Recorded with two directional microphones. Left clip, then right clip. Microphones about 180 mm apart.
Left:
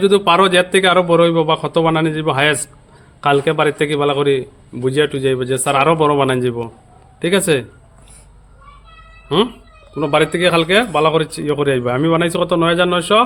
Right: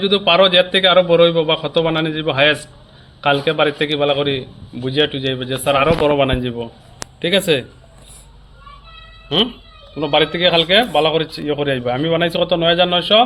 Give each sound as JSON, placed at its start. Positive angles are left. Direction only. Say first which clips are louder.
{"t": 0.0, "sound": "a man's voice", "louder": "left 1 dB", "side_deg": 85}
{"t": 9.9, "sound": "a man's voice", "louder": "left 1 dB", "side_deg": 65}